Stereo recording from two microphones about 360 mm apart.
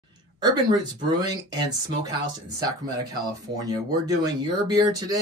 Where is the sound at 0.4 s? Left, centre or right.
Centre.